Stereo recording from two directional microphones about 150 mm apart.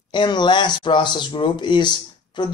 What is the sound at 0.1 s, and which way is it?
A man's voice, 30° left (ahead or behind).